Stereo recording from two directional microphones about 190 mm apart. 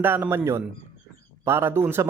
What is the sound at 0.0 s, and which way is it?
Speech, 10° right (ahead or behind).